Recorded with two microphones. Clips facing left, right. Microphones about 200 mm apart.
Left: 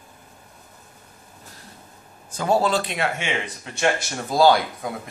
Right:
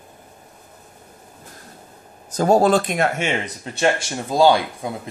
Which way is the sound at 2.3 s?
45° right (ahead or behind).